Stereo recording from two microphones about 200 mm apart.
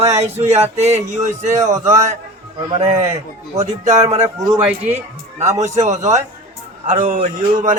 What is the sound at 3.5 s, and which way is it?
Speech, 20° right (ahead or behind).